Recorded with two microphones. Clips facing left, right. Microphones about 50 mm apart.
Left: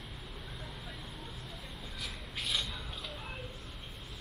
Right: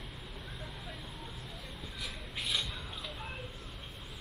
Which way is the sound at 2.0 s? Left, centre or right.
Centre.